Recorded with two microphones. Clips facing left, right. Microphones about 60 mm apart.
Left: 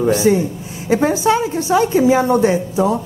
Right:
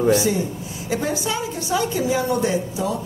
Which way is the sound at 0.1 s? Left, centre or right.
Left.